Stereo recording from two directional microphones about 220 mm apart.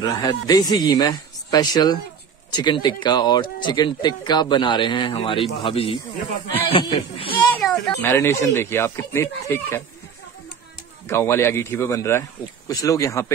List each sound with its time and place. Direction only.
0.0 s a man's voice: 15° left (ahead or behind)
7.3 s a sound: centre (ahead or behind)
7.8 s a man's voice: 10° left (ahead or behind)
11.1 s a man's voice: 10° left (ahead or behind)